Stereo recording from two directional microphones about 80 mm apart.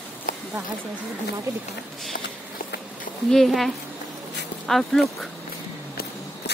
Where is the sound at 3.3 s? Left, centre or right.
Centre.